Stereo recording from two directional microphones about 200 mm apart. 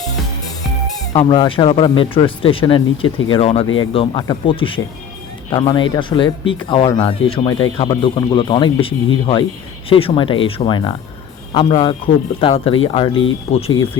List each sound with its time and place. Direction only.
1.1 s speech: 25° left (ahead or behind)
14.0 s speech: 20° left (ahead or behind)